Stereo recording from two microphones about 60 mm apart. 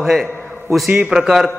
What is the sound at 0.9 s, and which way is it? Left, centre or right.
Speech, centre.